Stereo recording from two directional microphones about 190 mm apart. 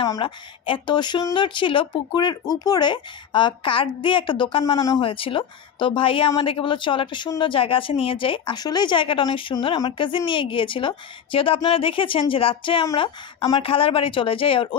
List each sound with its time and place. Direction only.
0.0 s speech: 25° left (ahead or behind)